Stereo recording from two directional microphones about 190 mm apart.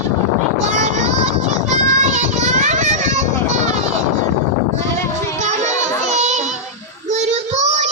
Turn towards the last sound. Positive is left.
turn(degrees=-35)  # may be behind; listen again after turning